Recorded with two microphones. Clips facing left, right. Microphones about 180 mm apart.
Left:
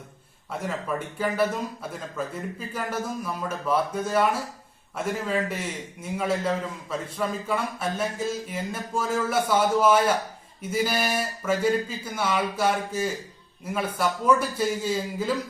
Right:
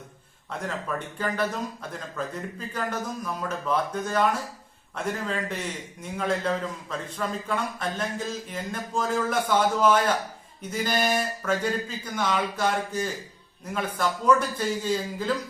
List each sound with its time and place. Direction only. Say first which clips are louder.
0.6 s speech: left 2 dB; 10° left (ahead or behind)